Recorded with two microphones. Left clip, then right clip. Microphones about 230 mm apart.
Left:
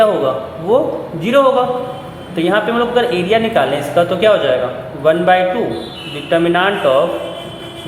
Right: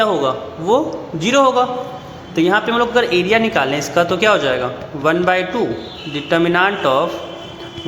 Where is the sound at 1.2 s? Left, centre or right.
Right.